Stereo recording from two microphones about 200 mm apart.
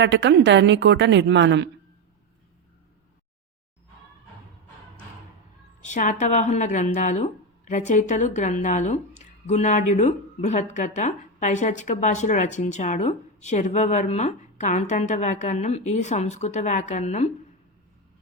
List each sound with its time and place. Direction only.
0.0 s a woman's voice: 60° right (ahead or behind)
5.8 s speech: 40° left (ahead or behind)